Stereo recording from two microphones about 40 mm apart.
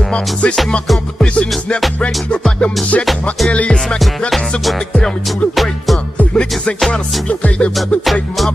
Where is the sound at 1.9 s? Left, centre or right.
Left.